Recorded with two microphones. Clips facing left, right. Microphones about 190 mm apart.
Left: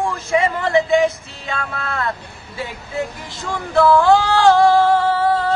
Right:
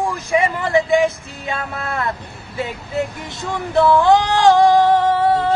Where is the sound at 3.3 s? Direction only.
20° right (ahead or behind).